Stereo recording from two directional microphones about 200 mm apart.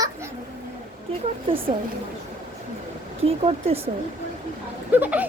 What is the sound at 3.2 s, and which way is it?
Speech, 30° right (ahead or behind).